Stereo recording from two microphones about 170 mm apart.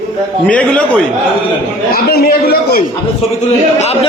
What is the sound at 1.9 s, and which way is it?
Speech, 65° left (ahead or behind).